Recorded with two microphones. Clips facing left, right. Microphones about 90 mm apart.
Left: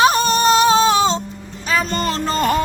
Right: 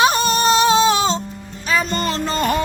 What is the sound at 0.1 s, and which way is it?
Music, 40° left (ahead or behind).